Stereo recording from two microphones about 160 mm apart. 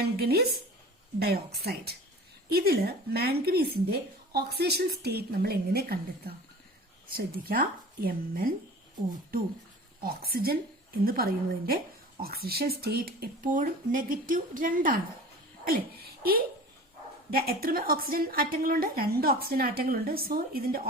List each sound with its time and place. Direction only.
0.0 s a woman's voice: 85° right
2.5 s a child's voice: 75° right (ahead or behind)